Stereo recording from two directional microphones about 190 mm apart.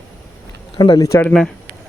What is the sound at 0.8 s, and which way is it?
Speech, 20° left (ahead or behind).